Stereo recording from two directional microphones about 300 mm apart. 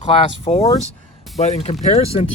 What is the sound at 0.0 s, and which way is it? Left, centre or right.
Speech, centre.